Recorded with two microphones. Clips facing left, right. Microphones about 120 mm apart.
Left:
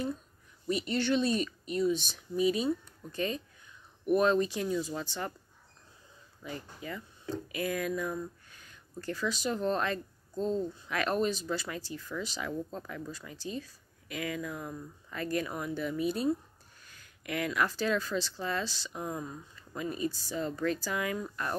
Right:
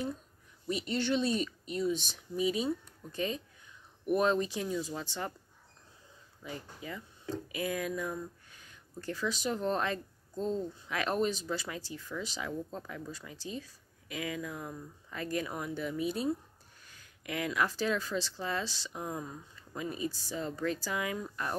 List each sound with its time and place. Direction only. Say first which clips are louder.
0.7 s speech: left 2 dB; 20° right (ahead or behind)
6.4 s speech: left 2 dB; 15° right (ahead or behind)